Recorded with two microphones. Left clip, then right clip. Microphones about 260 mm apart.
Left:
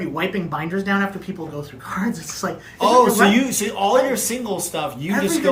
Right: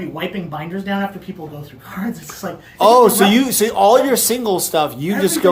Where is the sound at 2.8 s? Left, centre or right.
Centre.